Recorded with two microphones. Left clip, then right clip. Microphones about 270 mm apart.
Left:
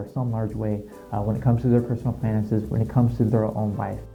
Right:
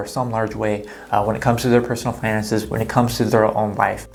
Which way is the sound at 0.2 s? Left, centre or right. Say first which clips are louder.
Right 9 dB; centre.